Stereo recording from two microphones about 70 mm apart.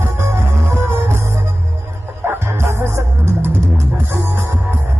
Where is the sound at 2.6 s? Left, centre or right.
Right.